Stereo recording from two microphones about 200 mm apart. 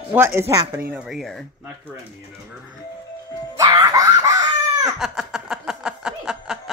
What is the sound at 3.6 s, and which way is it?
Screaming, 20° right (ahead or behind).